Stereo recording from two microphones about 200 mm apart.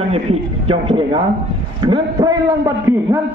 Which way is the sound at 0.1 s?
30° right (ahead or behind).